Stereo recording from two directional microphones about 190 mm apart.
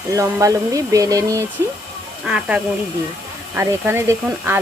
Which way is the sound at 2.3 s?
5° right (ahead or behind).